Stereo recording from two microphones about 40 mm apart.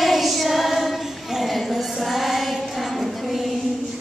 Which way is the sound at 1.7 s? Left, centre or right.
Centre.